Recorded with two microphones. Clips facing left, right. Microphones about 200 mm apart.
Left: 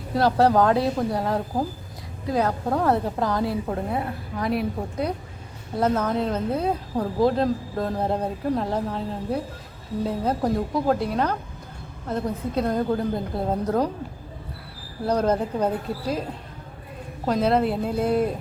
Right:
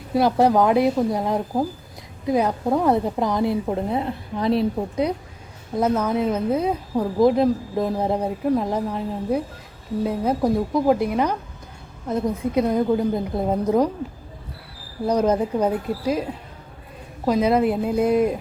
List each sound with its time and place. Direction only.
0.1 s a woman's voice: 15° right (ahead or behind)
5.8 s a woman's voice: 10° right (ahead or behind)
15.0 s a woman's voice: 10° right (ahead or behind)